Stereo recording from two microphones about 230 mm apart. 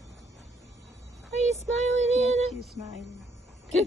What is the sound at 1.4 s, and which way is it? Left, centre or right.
Child singing, right.